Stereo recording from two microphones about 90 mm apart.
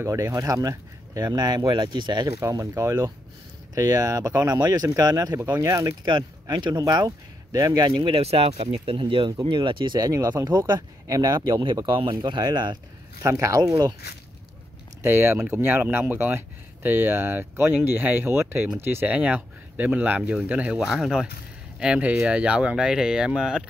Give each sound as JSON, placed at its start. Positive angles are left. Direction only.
{"t": 0.0, "sound": "speech", "side_deg": -35}
{"t": 1.7, "sound": "speech", "side_deg": -60}
{"t": 2.5, "sound": "speech", "side_deg": -35}
{"t": 7.9, "sound": "speech", "side_deg": -90}
{"t": 8.8, "sound": "speech", "side_deg": -75}
{"t": 9.9, "sound": "speech", "side_deg": -45}
{"t": 11.3, "sound": "speech", "side_deg": -60}
{"t": 13.2, "sound": "speech", "side_deg": -35}
{"t": 15.0, "sound": "speech", "side_deg": -30}
{"t": 19.0, "sound": "speech", "side_deg": -15}